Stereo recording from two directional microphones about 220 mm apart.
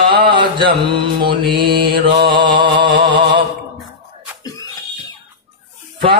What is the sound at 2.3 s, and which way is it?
Mantra, 20° right (ahead or behind).